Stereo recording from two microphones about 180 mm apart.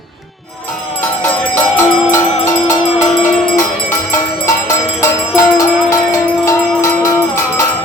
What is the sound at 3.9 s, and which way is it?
Music, 15° left (ahead or behind).